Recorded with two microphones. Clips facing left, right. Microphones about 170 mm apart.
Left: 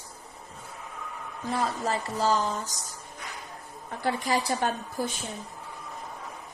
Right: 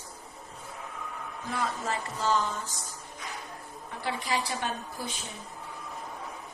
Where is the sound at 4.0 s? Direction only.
45° left (ahead or behind).